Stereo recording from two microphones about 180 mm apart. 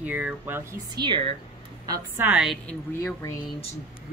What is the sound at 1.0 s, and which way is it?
Speech, 25° right (ahead or behind).